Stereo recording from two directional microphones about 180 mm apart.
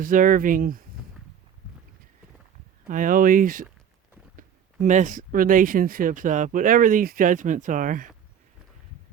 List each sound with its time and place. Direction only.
0.0 s speech: 50° right (ahead or behind)
2.9 s speech: 50° right (ahead or behind)